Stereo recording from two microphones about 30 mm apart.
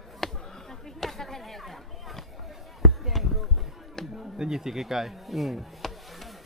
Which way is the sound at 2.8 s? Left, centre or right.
Centre.